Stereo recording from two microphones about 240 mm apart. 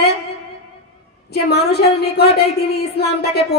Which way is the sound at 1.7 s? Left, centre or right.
Left.